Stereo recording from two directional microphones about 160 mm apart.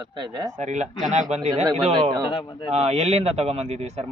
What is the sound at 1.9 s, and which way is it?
Speech, 30° right (ahead or behind).